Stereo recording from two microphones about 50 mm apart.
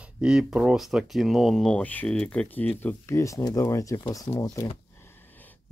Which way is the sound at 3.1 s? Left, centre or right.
Left.